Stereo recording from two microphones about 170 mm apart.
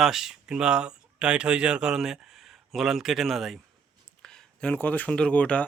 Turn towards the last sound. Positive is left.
turn(degrees=5)  # may be behind; listen again after turning